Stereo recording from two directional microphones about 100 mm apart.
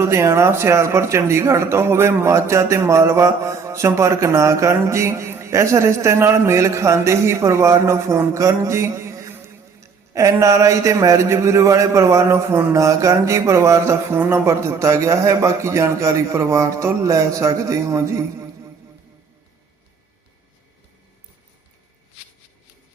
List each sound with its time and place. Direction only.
0.0 s speech: 30° right (ahead or behind)